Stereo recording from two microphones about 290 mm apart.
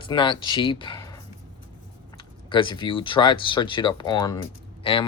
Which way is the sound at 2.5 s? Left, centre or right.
Centre.